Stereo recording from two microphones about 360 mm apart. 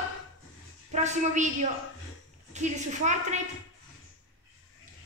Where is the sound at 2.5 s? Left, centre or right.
Centre.